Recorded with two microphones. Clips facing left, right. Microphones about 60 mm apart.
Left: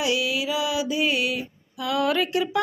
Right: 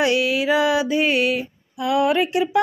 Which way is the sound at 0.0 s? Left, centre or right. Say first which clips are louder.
Right 6 dB; right.